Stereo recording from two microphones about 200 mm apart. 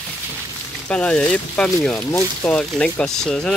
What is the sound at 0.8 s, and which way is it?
Speech, 5° left (ahead or behind).